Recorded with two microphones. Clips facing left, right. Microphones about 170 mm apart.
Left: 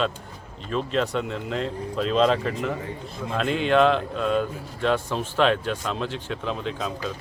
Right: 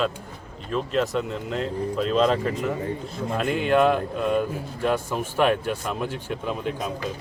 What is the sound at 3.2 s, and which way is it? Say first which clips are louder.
Speech: even; 50° right (ahead or behind).